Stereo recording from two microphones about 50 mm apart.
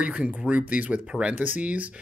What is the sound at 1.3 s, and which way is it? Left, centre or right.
Speech, right.